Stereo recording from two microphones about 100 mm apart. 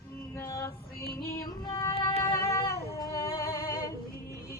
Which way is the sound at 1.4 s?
45° left (ahead or behind).